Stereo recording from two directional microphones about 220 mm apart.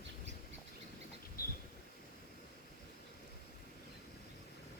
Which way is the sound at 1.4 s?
45° left (ahead or behind).